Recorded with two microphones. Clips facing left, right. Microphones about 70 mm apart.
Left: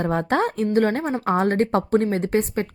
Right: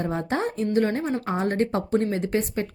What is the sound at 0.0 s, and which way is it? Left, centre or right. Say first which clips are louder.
A woman's voice: left 5 dB; left.